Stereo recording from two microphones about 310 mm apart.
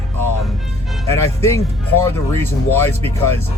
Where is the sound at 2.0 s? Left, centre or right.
Centre.